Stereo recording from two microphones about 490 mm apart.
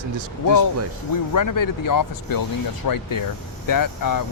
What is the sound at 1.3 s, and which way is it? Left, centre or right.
Speech, left.